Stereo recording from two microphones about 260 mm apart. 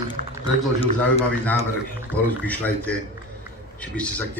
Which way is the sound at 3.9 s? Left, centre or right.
Centre.